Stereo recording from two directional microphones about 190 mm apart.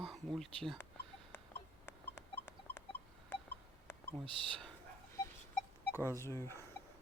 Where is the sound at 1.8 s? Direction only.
65° left (ahead or behind).